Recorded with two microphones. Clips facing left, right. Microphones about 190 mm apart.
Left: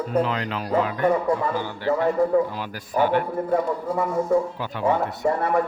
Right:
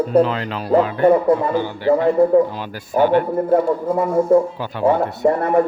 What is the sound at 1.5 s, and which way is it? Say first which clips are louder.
Speech: right 7 dB; 20° right (ahead or behind).